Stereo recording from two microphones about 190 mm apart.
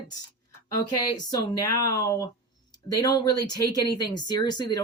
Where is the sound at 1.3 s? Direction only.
20° left (ahead or behind).